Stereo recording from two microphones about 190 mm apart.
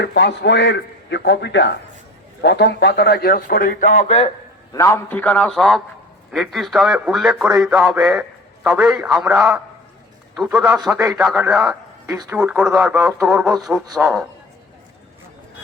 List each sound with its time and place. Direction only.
0.0 s a man's voice: 60° left (ahead or behind); by 4.3 s 35° left (ahead or behind)
4.7 s a man's voice: 15° left (ahead or behind); by 12.1 s 5° right (ahead or behind)
12.1 s speech: 20° right (ahead or behind)
12.4 s a man's voice: 5° right (ahead or behind)